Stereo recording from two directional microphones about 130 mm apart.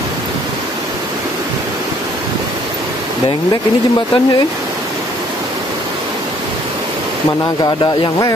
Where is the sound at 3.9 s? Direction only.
35° left (ahead or behind).